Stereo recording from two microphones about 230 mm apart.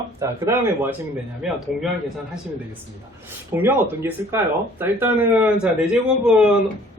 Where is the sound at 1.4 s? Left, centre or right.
Centre.